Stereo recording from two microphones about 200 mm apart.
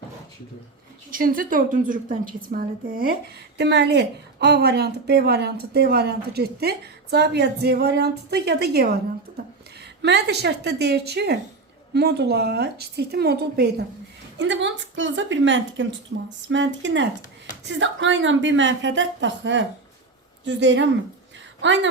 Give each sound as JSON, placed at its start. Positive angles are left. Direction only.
{"t": 1.1, "sound": "a woman's voice", "side_deg": -45}
{"t": 3.6, "sound": "a woman's voice", "side_deg": -60}
{"t": 10.0, "sound": "a woman's voice", "side_deg": -60}
{"t": 14.3, "sound": "a woman's voice", "side_deg": -65}